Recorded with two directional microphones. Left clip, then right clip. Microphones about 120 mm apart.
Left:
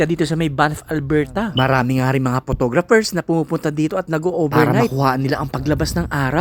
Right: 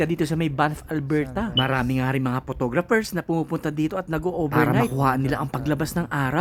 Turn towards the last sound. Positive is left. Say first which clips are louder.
# left 5 dB
turn(degrees=25)  # may be behind; listen again after turning